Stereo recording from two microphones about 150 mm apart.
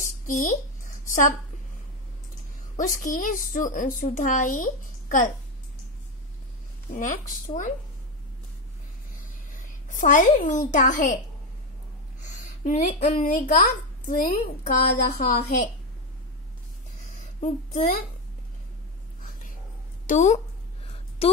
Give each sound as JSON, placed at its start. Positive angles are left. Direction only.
{"t": 0.3, "sound": "speech", "side_deg": 60}
{"t": 2.8, "sound": "a woman's voice", "side_deg": 65}
{"t": 6.9, "sound": "a woman's voice", "side_deg": 60}
{"t": 9.5, "sound": "a child's voice", "side_deg": 60}
{"t": 12.2, "sound": "a sound", "side_deg": 55}
{"t": 13.3, "sound": "speech", "side_deg": 70}
{"t": 17.2, "sound": "a sound", "side_deg": 55}
{"t": 20.1, "sound": "speech", "side_deg": 55}
{"t": 20.8, "sound": "a sound", "side_deg": 40}